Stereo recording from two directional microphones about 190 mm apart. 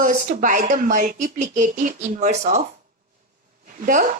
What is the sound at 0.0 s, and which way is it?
A woman's voice, 45° right (ahead or behind).